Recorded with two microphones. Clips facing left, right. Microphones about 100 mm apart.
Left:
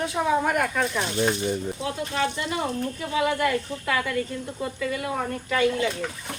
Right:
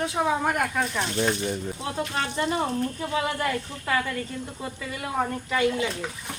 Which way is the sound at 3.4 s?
25° right (ahead or behind).